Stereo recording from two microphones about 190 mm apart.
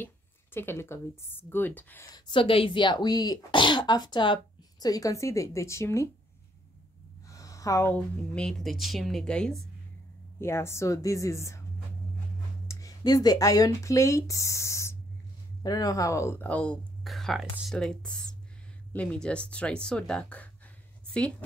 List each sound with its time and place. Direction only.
0.0 s a woman's voice: 10° left (ahead or behind)
2.1 s speech: 25° left (ahead or behind)
7.2 s speech: 15° left (ahead or behind)
10.4 s a woman's voice: 15° left (ahead or behind)
12.6 s speech: 20° left (ahead or behind)